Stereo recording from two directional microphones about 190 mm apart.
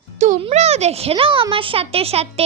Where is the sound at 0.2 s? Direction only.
35° right (ahead or behind).